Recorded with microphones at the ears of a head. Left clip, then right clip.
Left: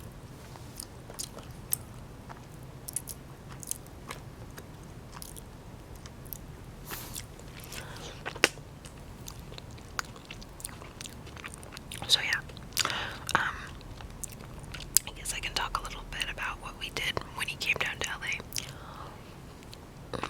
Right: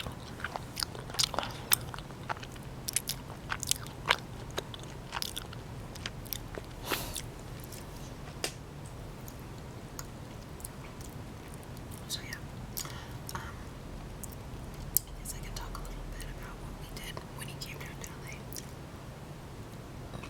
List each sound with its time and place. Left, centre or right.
0.4 s biting: right
2.8 s biting: right
12.0 s whispering: left
14.9 s whispering: left